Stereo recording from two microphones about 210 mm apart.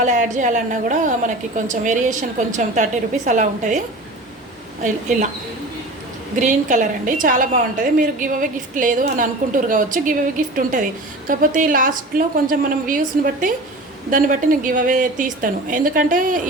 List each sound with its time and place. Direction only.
0.0 s a woman's voice: 35° right (ahead or behind)
6.4 s a woman's voice: 35° right (ahead or behind)